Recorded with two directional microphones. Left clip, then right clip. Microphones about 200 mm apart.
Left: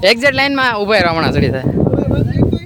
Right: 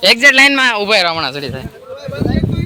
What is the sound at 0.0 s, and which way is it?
Speech, 35° left (ahead or behind).